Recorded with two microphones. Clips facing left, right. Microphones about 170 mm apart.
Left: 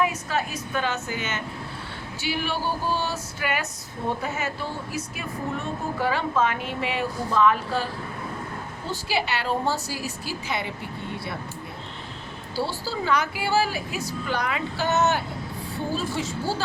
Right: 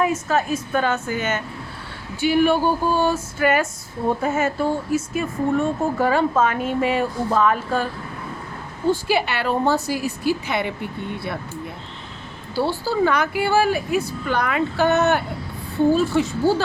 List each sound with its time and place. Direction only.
0.0 s speech: 45° right (ahead or behind)
8.9 s a woman's voice: 55° right (ahead or behind)
12.5 s a woman's voice: 55° right (ahead or behind)